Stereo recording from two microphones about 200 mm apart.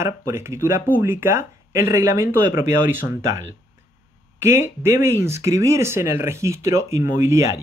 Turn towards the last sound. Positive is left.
turn(degrees=-15)  # may be behind; listen again after turning